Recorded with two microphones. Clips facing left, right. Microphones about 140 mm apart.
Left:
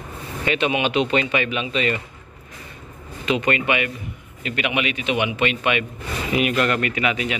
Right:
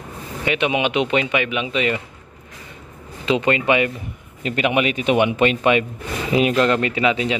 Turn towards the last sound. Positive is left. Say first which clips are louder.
# right 4 dB
turn(degrees=-25)  # may be behind; listen again after turning